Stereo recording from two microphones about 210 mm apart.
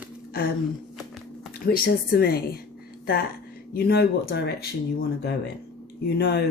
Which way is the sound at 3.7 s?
50° left (ahead or behind).